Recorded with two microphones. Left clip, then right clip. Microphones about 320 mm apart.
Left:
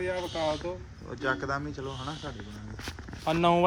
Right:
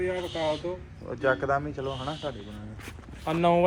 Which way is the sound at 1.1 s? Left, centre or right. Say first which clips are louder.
Right 5 dB; centre.